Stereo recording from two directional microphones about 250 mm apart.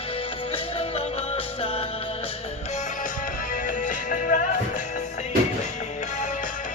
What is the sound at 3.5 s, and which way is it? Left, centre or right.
Music, left.